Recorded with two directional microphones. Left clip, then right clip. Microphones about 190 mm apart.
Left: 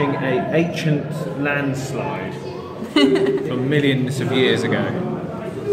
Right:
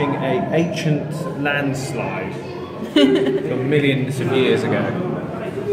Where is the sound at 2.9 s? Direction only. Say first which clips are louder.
Right 1 dB; centre (ahead or behind).